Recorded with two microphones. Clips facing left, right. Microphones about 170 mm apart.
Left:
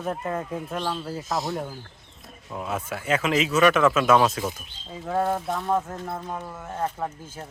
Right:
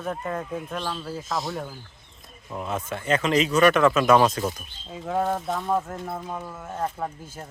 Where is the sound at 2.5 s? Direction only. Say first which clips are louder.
Even; centre (ahead or behind).